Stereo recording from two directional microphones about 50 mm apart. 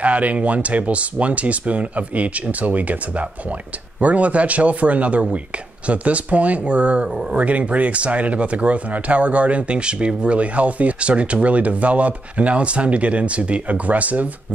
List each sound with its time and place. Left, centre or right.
0.0 s speech: right